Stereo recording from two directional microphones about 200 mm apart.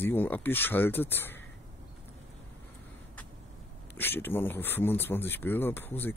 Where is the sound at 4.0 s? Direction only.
10° left (ahead or behind).